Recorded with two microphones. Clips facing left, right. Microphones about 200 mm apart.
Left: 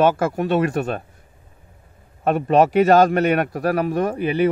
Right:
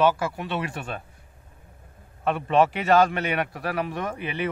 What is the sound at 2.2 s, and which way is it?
A man's voice, 45° left (ahead or behind).